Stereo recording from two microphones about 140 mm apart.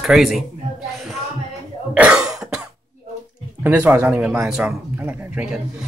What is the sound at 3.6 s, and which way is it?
A man's voice, 15° right (ahead or behind).